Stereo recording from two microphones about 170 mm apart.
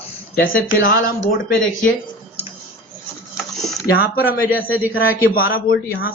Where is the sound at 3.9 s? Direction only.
65° left (ahead or behind).